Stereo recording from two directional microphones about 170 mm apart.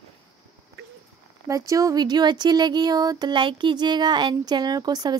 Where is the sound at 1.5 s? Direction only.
20° right (ahead or behind).